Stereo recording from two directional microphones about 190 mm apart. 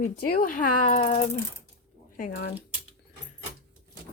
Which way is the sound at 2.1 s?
50° left (ahead or behind).